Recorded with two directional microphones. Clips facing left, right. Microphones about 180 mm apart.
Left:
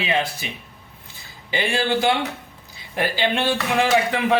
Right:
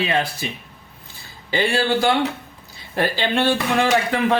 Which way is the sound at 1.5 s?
15° left (ahead or behind).